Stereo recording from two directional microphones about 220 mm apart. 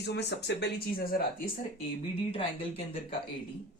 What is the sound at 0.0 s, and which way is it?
A woman's voice, 50° left (ahead or behind).